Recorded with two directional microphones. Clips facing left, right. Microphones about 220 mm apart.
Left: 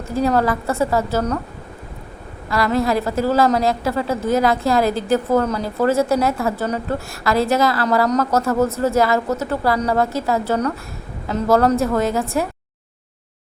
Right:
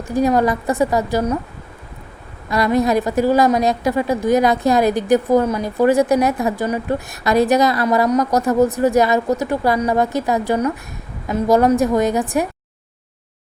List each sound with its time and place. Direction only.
0.1 s a woman's voice: 15° right (ahead or behind)
2.5 s a woman's voice: 20° right (ahead or behind)